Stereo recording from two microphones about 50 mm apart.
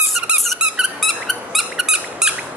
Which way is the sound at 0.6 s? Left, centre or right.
Centre.